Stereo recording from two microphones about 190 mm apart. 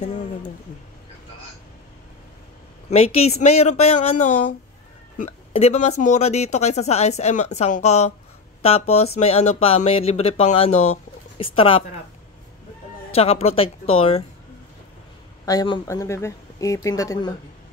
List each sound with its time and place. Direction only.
0.0 s speech: 40° left (ahead or behind)
2.9 s speech: 35° left (ahead or behind)
13.1 s speech: 30° left (ahead or behind)
15.4 s speech: 20° left (ahead or behind)